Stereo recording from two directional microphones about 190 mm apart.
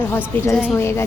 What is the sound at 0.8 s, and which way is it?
Speech, 15° left (ahead or behind).